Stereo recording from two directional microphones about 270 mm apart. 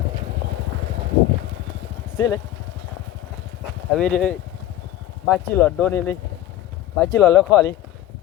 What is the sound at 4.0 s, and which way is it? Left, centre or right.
Speech, centre.